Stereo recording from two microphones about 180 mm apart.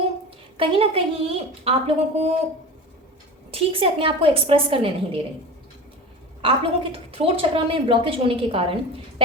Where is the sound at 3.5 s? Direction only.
30° right (ahead or behind).